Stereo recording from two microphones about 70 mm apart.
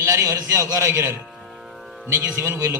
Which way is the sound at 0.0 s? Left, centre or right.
Right.